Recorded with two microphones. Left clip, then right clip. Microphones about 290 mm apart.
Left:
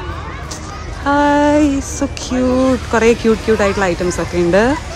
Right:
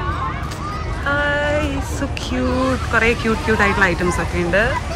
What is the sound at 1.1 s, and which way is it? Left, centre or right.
Music, centre.